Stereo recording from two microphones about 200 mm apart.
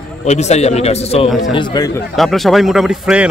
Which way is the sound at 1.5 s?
20° left (ahead or behind).